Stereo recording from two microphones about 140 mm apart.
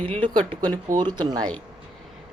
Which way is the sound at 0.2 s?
35° right (ahead or behind).